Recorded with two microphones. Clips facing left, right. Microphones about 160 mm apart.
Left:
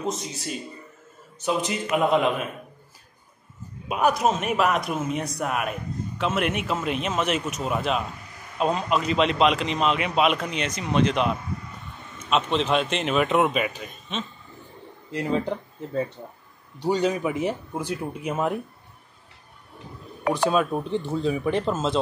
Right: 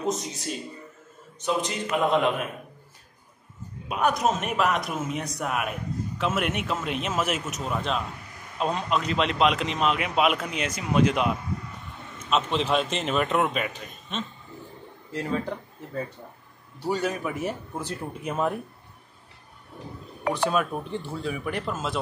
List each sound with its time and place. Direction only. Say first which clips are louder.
1.4 s a man's voice: left 2 dB; 5° left (ahead or behind)
3.9 s a man's voice: left 2 dB; 5° left (ahead or behind)
15.0 s speech: left 4 dB; 20° left (ahead or behind)
20.3 s speech: left 3 dB; 15° left (ahead or behind)